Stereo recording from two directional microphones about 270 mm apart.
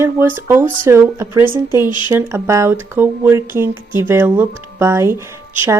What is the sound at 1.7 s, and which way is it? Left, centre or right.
Speech, centre.